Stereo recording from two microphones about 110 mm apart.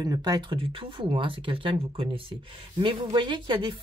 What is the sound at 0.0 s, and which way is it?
Speech, 35° right (ahead or behind).